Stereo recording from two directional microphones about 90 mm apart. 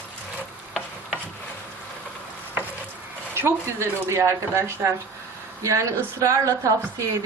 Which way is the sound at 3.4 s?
30° right (ahead or behind).